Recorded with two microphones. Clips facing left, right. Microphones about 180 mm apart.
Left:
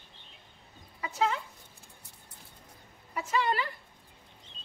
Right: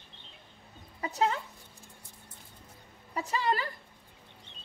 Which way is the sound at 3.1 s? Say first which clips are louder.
Left 1 dB; 35° right (ahead or behind).